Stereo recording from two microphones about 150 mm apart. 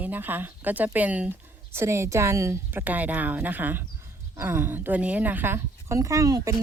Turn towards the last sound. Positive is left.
turn(degrees=-25)  # may be behind; listen again after turning